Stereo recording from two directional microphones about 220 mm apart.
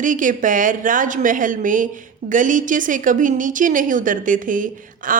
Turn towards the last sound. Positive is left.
turn(degrees=-35)  # may be behind; listen again after turning